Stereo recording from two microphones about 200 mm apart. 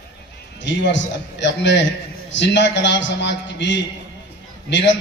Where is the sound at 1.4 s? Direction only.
60° left (ahead or behind).